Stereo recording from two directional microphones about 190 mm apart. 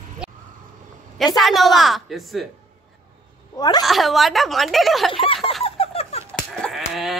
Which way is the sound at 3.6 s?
20° left (ahead or behind).